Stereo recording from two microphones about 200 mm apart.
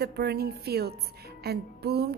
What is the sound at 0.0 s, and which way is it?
A woman's voice, 55° right (ahead or behind).